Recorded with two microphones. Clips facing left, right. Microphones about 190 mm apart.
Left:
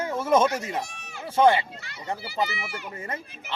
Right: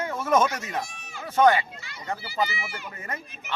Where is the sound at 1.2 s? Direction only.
30° left (ahead or behind).